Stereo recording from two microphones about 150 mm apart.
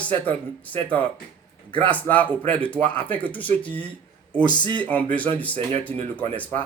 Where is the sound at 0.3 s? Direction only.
10° left (ahead or behind).